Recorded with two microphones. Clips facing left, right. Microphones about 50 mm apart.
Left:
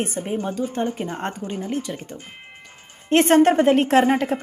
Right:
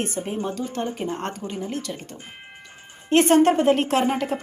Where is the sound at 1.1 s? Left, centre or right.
Left.